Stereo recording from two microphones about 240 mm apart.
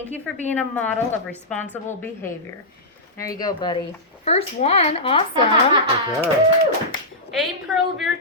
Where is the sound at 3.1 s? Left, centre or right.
Centre.